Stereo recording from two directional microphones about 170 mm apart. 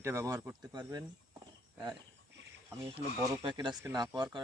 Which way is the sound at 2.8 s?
25° right (ahead or behind).